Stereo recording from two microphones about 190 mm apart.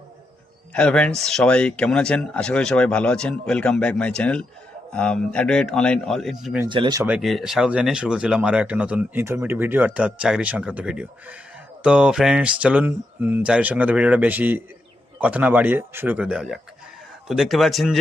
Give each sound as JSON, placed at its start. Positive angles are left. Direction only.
{"t": 0.7, "sound": "speech", "side_deg": 5}
{"t": 6.7, "sound": "speech", "side_deg": -25}
{"t": 7.0, "sound": "speech", "side_deg": -5}